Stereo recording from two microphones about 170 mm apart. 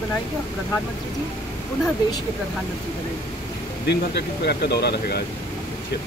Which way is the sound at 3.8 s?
80° left.